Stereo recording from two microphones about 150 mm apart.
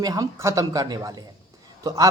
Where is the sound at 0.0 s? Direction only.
25° right (ahead or behind).